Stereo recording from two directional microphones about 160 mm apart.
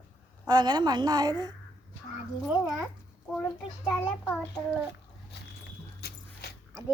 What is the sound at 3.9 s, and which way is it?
Speech, 10° left (ahead or behind).